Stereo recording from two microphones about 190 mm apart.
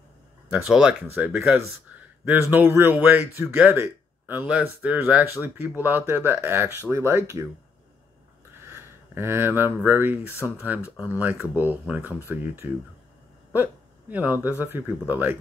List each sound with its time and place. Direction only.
0.5 s a man's voice: 5° right (ahead or behind)
8.5 s a sound: 15° right (ahead or behind)
9.8 s a man's voice: 10° right (ahead or behind)